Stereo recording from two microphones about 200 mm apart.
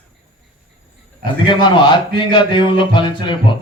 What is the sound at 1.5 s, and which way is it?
A man's voice, 25° left (ahead or behind).